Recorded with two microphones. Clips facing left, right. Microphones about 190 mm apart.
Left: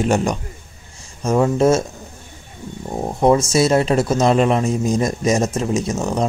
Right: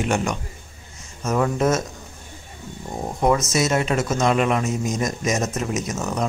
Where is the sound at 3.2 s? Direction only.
30° left (ahead or behind).